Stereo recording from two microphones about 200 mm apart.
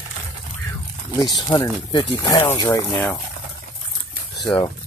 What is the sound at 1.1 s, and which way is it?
Speech, 20° left (ahead or behind).